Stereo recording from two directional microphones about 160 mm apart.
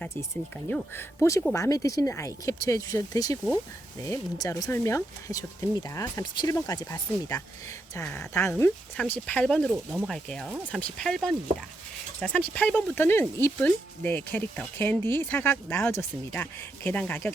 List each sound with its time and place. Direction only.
0.7 s speech: 15° left (ahead or behind)
9.9 s speech: 5° right (ahead or behind); by 17.3 s 10° left (ahead or behind)